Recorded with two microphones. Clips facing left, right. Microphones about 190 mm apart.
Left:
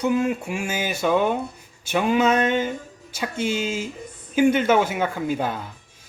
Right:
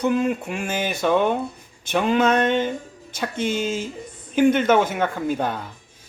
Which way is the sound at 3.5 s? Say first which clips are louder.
Right 1 dB; 50° right (ahead or behind).